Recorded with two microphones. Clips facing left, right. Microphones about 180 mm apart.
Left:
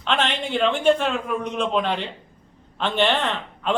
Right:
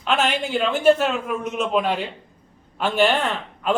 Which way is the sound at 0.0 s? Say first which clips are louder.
Right 2 dB; 5° right (ahead or behind).